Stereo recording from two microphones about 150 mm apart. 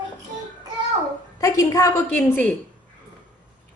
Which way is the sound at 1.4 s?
20° left (ahead or behind).